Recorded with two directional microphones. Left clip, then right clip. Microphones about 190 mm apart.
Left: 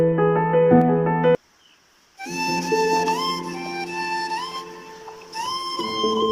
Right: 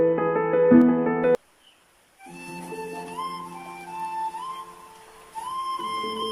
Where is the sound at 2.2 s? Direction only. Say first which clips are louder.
Left 14 dB; 60° left (ahead or behind).